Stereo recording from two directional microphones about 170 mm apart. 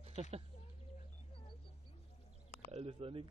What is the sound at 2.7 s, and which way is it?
Speech, 35° right (ahead or behind).